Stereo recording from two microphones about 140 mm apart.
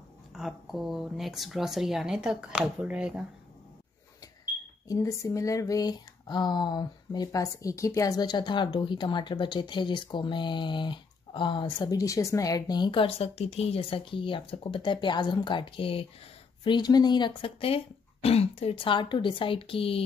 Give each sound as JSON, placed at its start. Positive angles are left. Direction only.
{"t": 0.3, "sound": "speech", "side_deg": 0}
{"t": 4.8, "sound": "speech", "side_deg": 20}